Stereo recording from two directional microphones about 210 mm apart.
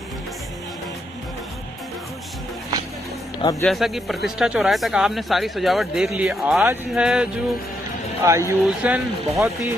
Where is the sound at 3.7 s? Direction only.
Centre (ahead or behind).